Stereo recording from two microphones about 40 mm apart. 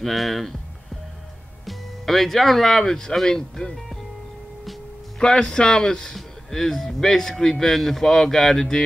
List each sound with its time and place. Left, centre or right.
0.0 s speech: centre
1.7 s speech: centre
5.2 s speech: centre